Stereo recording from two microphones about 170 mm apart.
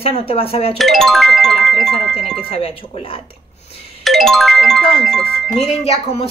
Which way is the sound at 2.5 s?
35° left (ahead or behind).